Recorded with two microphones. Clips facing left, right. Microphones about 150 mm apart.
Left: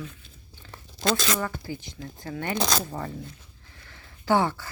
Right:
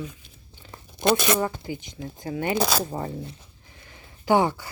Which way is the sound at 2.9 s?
25° right (ahead or behind).